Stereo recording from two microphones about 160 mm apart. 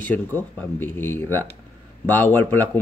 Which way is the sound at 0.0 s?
10° left (ahead or behind).